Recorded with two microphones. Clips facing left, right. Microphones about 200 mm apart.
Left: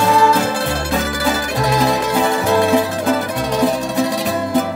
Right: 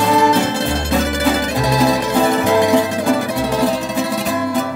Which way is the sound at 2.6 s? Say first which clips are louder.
Right 1 dB; 15° right (ahead or behind).